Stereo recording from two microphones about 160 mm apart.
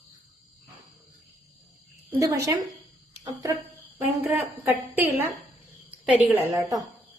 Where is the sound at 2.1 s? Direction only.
20° right (ahead or behind).